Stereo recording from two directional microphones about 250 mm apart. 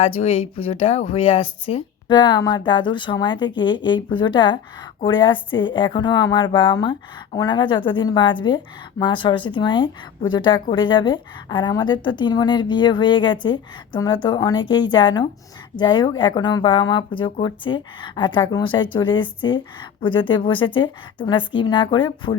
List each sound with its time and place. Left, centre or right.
0.0 s a woman's voice: left